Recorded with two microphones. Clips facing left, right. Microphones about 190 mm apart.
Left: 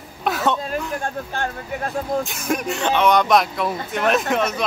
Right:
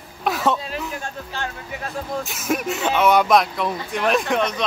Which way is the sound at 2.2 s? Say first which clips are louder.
Even; centre (ahead or behind).